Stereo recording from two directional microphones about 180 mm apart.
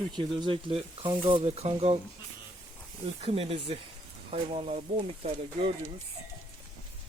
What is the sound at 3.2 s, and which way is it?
Speech, 30° right (ahead or behind).